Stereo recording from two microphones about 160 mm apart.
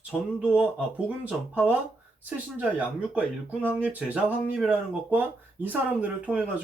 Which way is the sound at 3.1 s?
10° right (ahead or behind).